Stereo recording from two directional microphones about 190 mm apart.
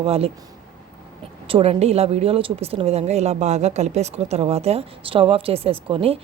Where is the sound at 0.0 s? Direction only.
30° right (ahead or behind).